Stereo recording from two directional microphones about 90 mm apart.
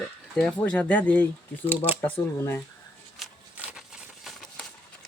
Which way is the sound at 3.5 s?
10° right (ahead or behind).